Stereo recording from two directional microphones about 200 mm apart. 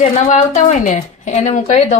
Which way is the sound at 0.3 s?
40° left (ahead or behind).